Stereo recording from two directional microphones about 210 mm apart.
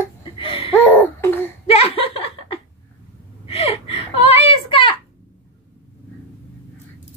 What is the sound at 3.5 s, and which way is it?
Gasp, 30° left (ahead or behind).